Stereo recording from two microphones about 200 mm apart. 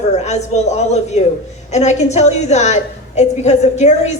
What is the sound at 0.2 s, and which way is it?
A woman's voice, 35° left (ahead or behind).